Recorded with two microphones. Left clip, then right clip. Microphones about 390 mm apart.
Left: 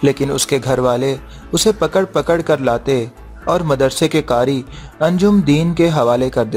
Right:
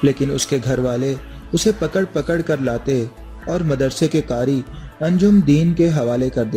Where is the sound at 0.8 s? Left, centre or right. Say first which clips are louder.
Left 6 dB; left.